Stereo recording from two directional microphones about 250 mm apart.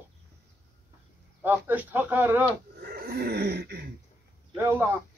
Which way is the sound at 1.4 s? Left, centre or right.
Centre.